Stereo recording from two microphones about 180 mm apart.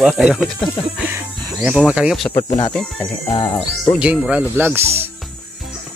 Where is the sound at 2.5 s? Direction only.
25° left (ahead or behind).